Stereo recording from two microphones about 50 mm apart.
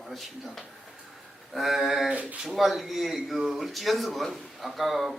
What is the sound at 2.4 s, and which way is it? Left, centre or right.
Speech, centre.